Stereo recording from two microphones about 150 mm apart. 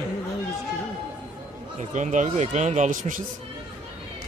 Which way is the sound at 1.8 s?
55° right (ahead or behind).